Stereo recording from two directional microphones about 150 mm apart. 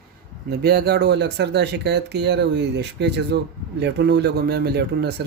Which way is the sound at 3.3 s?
90° right.